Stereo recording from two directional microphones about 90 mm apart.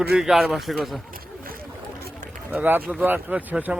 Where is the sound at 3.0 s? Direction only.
20° right (ahead or behind).